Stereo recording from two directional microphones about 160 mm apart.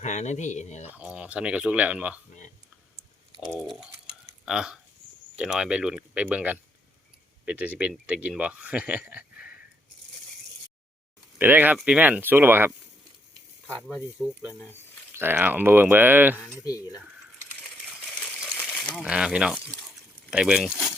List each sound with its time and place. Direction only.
0.0 s speech: 50° left (ahead or behind)
0.9 s speech: 10° right (ahead or behind)
3.6 s speech: centre (ahead or behind)
11.3 s speech: 10° right (ahead or behind)
13.7 s speech: centre (ahead or behind)
16.6 s speech: 20° left (ahead or behind)
16.9 s coin: 10° right (ahead or behind)
19.0 s speech: 5° right (ahead or behind)